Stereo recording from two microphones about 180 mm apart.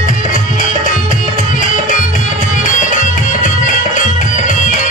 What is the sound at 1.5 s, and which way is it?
Music, 45° left (ahead or behind).